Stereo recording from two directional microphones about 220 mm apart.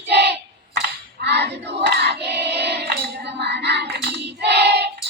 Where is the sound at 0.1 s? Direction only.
50° right (ahead or behind).